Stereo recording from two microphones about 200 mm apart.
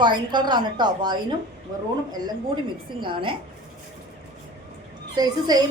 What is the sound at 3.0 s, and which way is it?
Speech, 25° right (ahead or behind).